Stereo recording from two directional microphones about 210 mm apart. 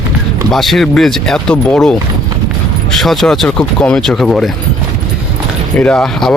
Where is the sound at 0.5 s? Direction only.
Centre (ahead or behind).